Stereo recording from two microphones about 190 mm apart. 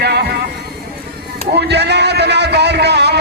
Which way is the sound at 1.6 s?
60° right (ahead or behind).